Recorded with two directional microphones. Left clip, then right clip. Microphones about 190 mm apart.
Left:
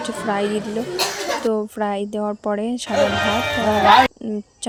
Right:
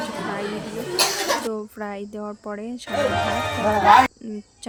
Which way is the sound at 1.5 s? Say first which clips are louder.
Left 8 dB; 25° left (ahead or behind).